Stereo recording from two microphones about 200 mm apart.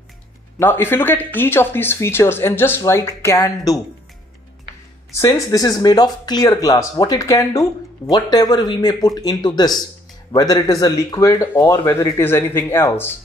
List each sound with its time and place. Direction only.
0.6 s speech: 10° left (ahead or behind)
5.1 s speech: 15° left (ahead or behind)